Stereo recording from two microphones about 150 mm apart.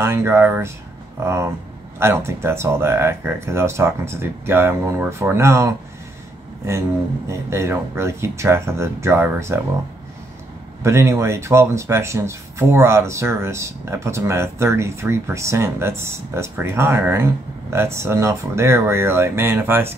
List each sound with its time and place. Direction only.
0.0 s speech: 15° right (ahead or behind)
7.2 s speech: 20° right (ahead or behind)
10.8 s speech: 20° right (ahead or behind)